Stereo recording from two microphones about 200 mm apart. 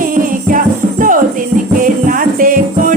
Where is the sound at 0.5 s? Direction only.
40° right (ahead or behind).